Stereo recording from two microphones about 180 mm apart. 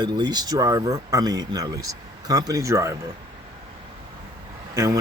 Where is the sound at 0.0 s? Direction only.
25° right (ahead or behind).